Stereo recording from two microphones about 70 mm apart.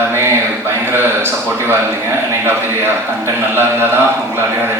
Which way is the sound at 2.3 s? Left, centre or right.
Right.